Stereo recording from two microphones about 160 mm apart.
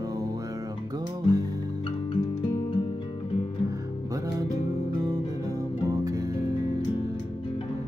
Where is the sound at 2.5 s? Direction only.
30° left (ahead or behind).